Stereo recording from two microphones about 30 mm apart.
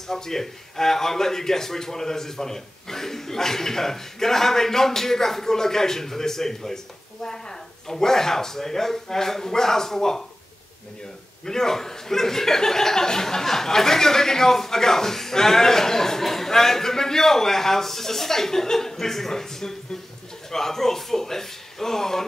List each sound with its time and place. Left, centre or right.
0.1 s speech: centre
11.4 s speech: centre